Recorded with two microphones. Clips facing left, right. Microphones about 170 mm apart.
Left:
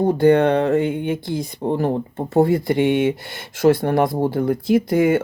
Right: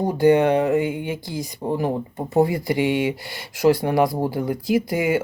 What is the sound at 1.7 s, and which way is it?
Speech, 10° right (ahead or behind).